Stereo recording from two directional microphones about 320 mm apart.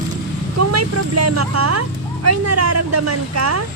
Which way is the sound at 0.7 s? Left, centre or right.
Right.